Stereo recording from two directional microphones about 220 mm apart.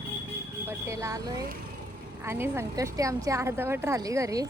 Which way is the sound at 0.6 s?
15° right (ahead or behind).